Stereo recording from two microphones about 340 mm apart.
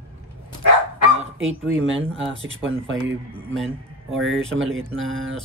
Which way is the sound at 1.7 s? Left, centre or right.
Right.